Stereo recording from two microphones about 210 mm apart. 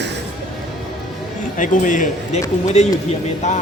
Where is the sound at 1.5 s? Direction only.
40° left (ahead or behind).